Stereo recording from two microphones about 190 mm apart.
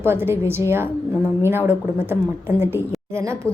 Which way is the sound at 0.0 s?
10° right (ahead or behind).